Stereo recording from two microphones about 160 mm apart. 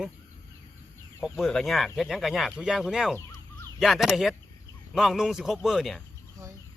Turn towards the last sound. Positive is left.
turn(degrees=0)  # may be behind; listen again after turning